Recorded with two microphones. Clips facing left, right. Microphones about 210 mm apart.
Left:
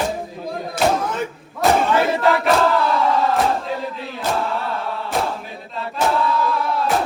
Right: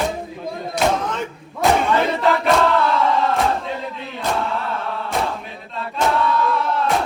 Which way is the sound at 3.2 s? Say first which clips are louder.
Left 1 dB; centre (ahead or behind).